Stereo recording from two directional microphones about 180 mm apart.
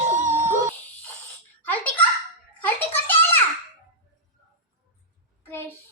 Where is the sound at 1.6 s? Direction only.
10° left (ahead or behind).